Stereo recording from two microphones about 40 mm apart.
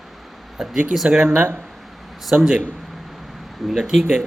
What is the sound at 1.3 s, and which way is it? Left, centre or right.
Speech, right.